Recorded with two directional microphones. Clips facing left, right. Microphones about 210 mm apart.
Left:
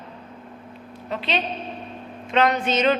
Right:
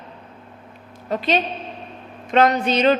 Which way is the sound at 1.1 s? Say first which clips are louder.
Right 5 dB; 45° right (ahead or behind).